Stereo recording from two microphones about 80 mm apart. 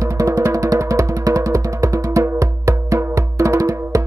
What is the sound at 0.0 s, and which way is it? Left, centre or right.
Music, right.